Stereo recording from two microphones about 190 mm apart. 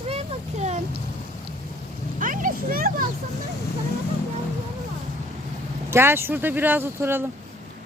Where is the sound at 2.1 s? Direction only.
45° right (ahead or behind).